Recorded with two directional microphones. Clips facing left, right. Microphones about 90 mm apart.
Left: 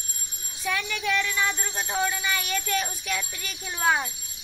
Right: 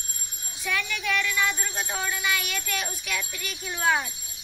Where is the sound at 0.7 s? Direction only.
30° left (ahead or behind).